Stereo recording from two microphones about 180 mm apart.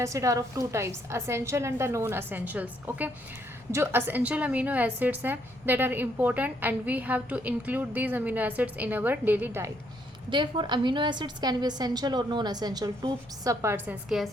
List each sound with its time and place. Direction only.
0.0 s a woman's voice: 15° right (ahead or behind)
10.2 s a woman's voice: 25° right (ahead or behind); by 14.3 s 5° right (ahead or behind)